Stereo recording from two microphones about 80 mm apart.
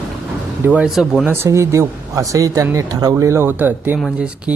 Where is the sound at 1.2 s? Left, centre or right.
Right.